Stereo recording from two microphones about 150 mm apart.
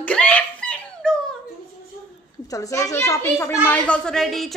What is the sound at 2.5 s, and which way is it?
A child's voice, 20° left (ahead or behind).